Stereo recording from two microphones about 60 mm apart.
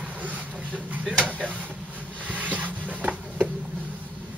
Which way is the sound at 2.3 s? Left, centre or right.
Right.